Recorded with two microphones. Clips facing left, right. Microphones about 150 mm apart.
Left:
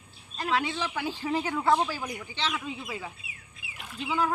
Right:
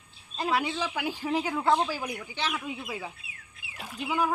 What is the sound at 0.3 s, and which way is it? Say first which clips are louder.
Speech: right 1 dB; 15° right (ahead or behind).